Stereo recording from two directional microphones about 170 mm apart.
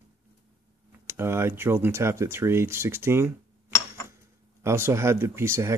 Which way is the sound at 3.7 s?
15° left (ahead or behind).